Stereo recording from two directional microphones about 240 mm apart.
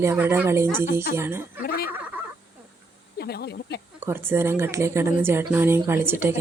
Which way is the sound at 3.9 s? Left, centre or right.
Centre.